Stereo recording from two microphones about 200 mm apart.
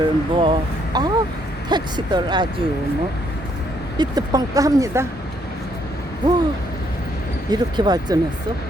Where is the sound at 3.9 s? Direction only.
20° right (ahead or behind).